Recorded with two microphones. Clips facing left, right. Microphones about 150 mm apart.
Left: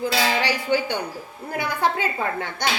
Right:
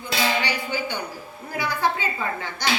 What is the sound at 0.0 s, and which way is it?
Speech, 80° left.